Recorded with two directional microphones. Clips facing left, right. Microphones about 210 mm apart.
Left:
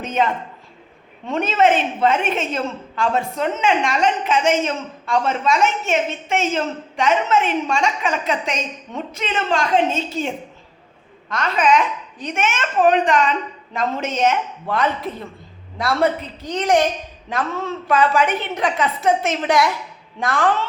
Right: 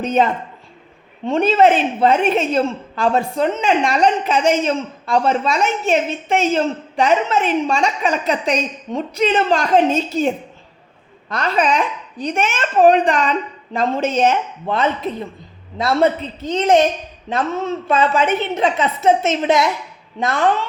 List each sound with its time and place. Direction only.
0.0 s a woman's voice: 35° right (ahead or behind)
1.3 s a woman's voice: 35° right (ahead or behind)